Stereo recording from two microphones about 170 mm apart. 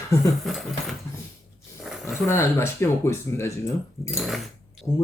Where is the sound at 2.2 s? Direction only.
15° left (ahead or behind).